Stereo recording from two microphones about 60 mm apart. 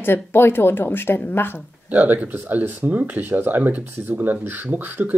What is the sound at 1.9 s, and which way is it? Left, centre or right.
Speech, right.